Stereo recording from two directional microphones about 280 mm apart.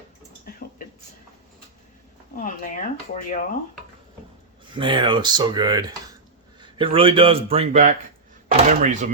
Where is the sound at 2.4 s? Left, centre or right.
Left.